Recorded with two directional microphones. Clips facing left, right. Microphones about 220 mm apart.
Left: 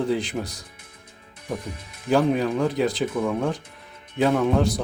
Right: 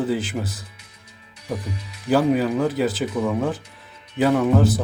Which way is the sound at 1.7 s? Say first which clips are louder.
Right 3 dB; 50° left (ahead or behind).